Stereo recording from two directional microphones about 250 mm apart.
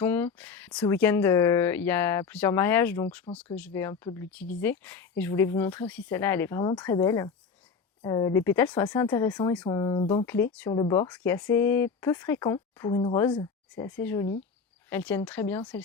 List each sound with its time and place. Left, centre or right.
0.0 s speech: centre
10.2 s speech: centre